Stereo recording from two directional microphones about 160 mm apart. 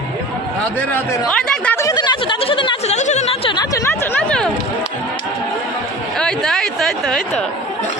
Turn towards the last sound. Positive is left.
turn(degrees=0)  # may be behind; listen again after turning